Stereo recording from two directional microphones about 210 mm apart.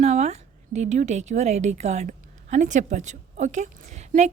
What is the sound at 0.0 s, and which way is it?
A woman's voice, 30° right (ahead or behind).